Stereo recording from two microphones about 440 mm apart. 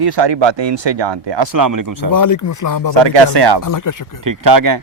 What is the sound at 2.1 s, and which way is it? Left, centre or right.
Speech, left.